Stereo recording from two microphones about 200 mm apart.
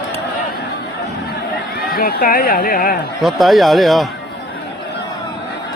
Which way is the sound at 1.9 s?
45° left (ahead or behind).